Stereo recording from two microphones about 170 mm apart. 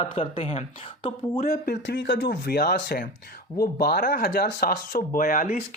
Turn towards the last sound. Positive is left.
turn(degrees=50)  # may be behind; listen again after turning